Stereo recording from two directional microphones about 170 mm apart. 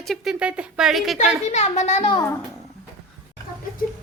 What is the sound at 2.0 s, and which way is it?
Speech, 25° left (ahead or behind).